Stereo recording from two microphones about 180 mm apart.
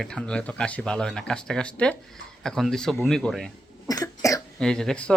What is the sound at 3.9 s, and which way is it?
Cough, 20° left (ahead or behind).